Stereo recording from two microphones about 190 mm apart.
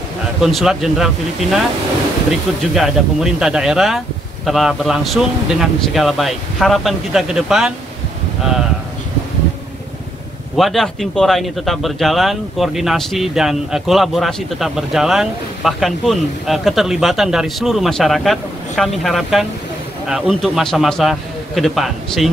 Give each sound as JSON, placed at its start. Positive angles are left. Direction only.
{"t": 0.4, "sound": "a man's voice", "side_deg": 0}
{"t": 2.7, "sound": "a man's voice", "side_deg": -5}
{"t": 10.5, "sound": "a man's voice", "side_deg": 0}